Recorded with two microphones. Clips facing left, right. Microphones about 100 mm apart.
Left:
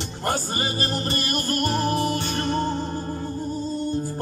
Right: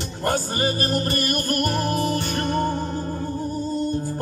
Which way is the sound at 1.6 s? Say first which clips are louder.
Left 2 dB; 25° left (ahead or behind).